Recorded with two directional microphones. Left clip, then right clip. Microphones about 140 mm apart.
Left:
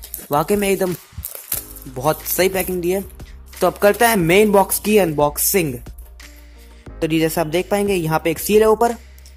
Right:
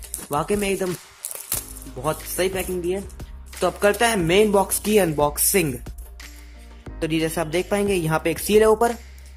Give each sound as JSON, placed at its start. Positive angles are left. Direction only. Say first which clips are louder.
{"t": 0.3, "sound": "a woman's voice", "louder": "left 5 dB", "side_deg": 30}
{"t": 1.9, "sound": "music", "louder": "left 9 dB", "side_deg": 0}
{"t": 2.3, "sound": "a woman's voice", "louder": "left 5 dB", "side_deg": 40}
{"t": 3.6, "sound": "a woman's voice", "louder": "left 5 dB", "side_deg": 30}
{"t": 7.0, "sound": "a woman's voice", "louder": "left 5 dB", "side_deg": 20}